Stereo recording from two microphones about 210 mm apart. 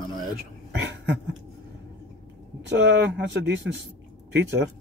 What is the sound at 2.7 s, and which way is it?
Speech, 55° right (ahead or behind).